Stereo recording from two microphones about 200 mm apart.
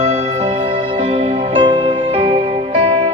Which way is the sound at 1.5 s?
25° right (ahead or behind).